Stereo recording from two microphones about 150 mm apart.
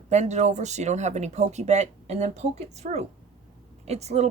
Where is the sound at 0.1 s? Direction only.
50° right (ahead or behind).